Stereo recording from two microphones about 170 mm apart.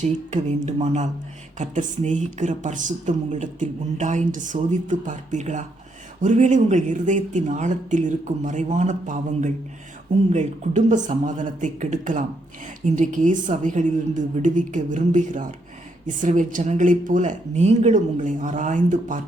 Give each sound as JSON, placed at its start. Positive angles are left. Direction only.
{"t": 0.0, "sound": "speech", "side_deg": -45}